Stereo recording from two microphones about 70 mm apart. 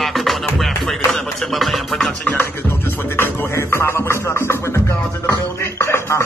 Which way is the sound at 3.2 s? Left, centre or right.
Left.